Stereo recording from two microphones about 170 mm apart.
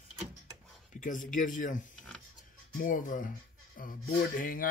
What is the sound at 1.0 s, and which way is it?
Speech, 50° left (ahead or behind).